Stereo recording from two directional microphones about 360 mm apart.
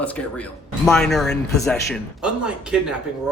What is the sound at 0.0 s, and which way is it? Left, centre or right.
Speech, centre.